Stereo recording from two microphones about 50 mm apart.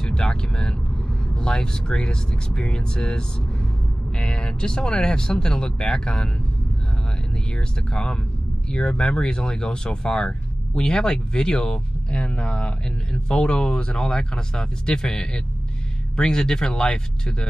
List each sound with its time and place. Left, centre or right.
0.0 s speech: centre
7.5 s speech: centre